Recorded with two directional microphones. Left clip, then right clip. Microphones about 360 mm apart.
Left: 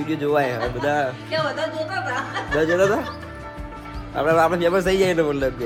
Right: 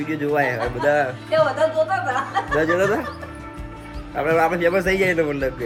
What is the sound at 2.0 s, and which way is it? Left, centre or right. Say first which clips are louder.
Speech: right 3 dB; centre.